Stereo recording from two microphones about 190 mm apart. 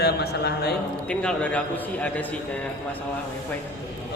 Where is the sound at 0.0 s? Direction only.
60° left (ahead or behind).